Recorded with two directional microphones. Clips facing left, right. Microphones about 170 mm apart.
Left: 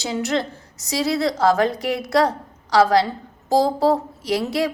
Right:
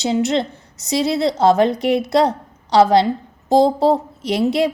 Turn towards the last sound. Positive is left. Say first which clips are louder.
# right 4 dB
turn(degrees=-25)  # may be behind; listen again after turning